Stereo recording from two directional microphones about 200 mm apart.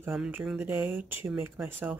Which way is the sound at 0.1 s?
Centre (ahead or behind).